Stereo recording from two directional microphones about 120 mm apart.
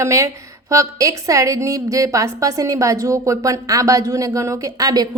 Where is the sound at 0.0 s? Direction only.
25° right (ahead or behind).